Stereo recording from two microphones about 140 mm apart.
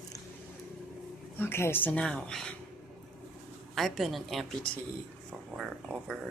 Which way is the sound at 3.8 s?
Centre (ahead or behind).